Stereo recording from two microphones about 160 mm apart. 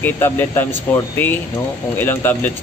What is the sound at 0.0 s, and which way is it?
Speech, 10° left (ahead or behind).